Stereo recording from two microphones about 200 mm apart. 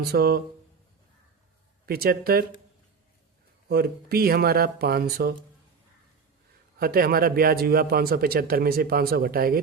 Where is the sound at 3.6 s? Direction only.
50° right (ahead or behind).